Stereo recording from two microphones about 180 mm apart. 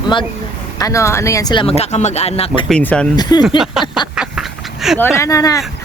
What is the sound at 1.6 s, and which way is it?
Speech, 35° left (ahead or behind).